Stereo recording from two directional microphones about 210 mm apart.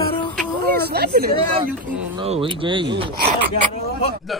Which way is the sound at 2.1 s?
25° right (ahead or behind).